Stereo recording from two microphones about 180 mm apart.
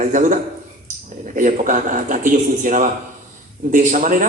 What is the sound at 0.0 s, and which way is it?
Speech, 45° right (ahead or behind).